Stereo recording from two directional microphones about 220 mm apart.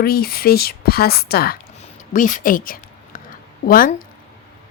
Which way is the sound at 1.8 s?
35° left (ahead or behind).